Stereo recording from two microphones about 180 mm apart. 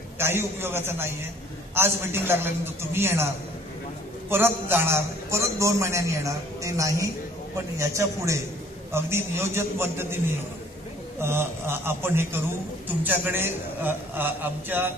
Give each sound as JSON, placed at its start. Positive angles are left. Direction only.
{"t": 0.2, "sound": "a man's voice", "side_deg": -15}
{"t": 4.3, "sound": "a man's voice", "side_deg": -10}
{"t": 11.1, "sound": "a man's voice", "side_deg": -15}